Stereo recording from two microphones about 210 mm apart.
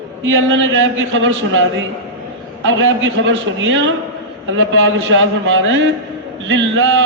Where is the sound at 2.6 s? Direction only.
65° right (ahead or behind).